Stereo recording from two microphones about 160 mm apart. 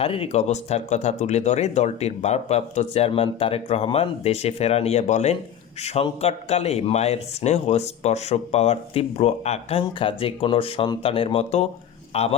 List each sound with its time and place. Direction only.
0.0 s speech: 35° left (ahead or behind)